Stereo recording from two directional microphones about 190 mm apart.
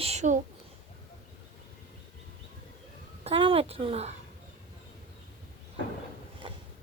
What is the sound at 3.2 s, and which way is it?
Speech, 30° right (ahead or behind).